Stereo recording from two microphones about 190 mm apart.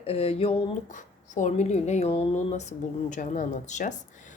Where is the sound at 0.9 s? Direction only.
40° left (ahead or behind).